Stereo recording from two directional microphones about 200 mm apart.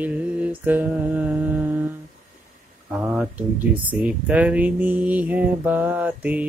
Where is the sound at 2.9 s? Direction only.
5° right (ahead or behind).